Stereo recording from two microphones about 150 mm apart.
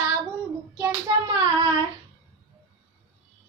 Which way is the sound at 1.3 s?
30° right (ahead or behind).